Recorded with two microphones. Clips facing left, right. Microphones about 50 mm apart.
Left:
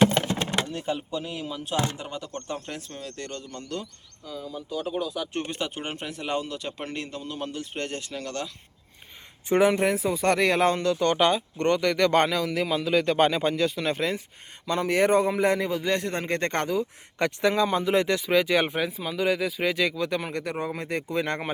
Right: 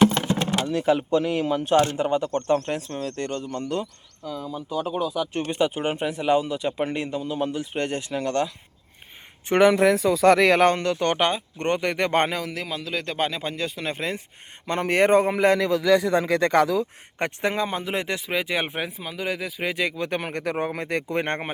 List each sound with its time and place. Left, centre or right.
0.2 s a sound: centre
0.7 s speech: right
9.6 s speech: right
10.6 s speech: right
11.3 s speech: right
12.5 s speech: centre
14.7 s speech: right
17.2 s speech: right
19.7 s speech: right
20.1 s speech: right
20.4 s speech: right
20.7 s speech: right